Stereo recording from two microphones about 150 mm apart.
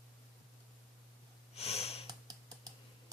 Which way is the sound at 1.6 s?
45° left (ahead or behind).